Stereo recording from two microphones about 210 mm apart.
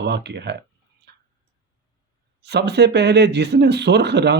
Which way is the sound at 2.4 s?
55° right (ahead or behind).